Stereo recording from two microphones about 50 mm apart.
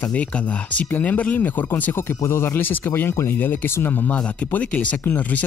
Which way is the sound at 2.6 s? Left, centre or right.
Left.